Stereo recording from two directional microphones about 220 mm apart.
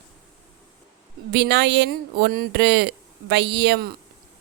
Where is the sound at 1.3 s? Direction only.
50° right (ahead or behind).